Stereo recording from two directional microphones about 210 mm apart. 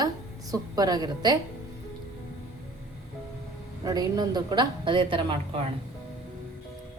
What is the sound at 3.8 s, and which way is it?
A woman's voice, 20° right (ahead or behind).